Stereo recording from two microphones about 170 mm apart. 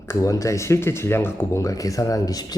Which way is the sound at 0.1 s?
20° left (ahead or behind).